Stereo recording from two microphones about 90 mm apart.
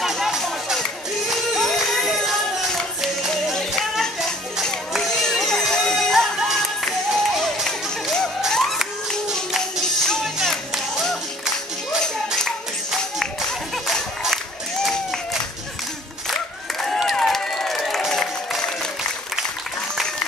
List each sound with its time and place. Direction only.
0.0 s music: centre (ahead or behind)
8.4 s a sound: 5° left (ahead or behind)
10.0 s music: 5° left (ahead or behind)
13.2 s music: 5° left (ahead or behind)
16.8 s music: 5° left (ahead or behind)